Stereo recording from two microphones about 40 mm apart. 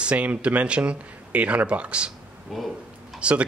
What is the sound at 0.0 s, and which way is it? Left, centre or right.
Speech, right.